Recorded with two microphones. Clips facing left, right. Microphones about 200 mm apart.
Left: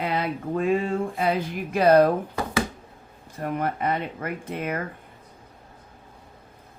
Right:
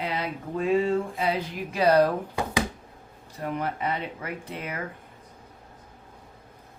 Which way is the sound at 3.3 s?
50° left (ahead or behind).